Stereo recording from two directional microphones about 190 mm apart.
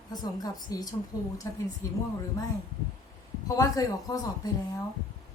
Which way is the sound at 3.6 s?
20° left (ahead or behind).